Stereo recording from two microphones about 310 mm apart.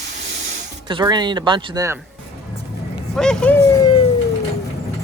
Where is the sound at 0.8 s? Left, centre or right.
Centre.